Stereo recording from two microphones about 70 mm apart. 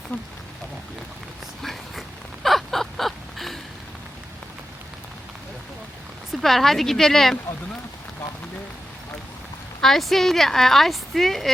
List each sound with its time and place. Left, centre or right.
0.1 s speech: left
1.6 s a sound: centre
6.3 s a woman's voice: centre
9.8 s a woman's voice: centre